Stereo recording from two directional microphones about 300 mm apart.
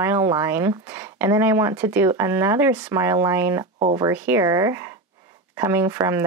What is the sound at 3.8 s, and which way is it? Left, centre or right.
Speech, centre.